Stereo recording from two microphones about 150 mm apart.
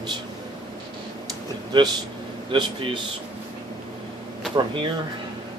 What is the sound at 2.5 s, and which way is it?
Speech, 35° right (ahead or behind).